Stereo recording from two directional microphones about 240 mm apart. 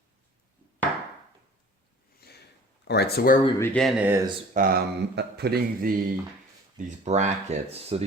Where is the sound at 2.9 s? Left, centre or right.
Left.